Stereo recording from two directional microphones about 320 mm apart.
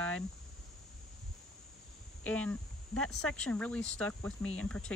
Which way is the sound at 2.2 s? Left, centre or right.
Centre.